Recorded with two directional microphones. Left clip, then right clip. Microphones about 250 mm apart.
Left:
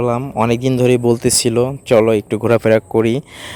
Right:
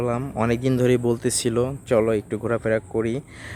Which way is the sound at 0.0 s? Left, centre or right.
Left.